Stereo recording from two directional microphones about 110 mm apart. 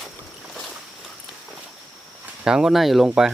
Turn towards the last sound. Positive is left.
turn(degrees=-5)  # may be behind; listen again after turning